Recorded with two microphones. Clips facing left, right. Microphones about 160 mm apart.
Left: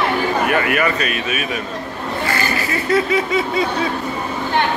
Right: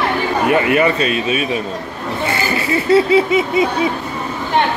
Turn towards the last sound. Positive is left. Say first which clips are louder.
# right 5 dB
turn(degrees=-20)  # may be behind; listen again after turning